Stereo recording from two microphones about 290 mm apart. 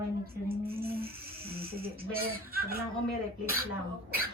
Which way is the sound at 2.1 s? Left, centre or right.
Right.